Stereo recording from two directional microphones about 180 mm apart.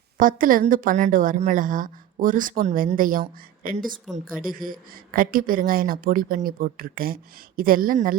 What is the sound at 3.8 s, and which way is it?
Speech, centre (ahead or behind).